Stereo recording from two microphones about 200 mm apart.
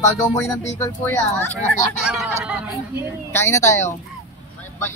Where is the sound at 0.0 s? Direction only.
15° left (ahead or behind).